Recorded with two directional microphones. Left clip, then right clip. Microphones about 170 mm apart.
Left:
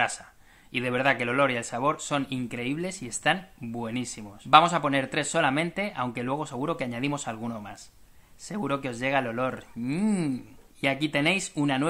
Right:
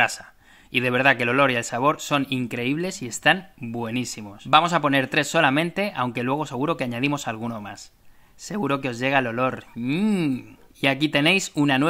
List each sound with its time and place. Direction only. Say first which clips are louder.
0.0 s speech: right 6 dB; 30° right (ahead or behind)
10.8 s speech: right 5 dB; 35° right (ahead or behind)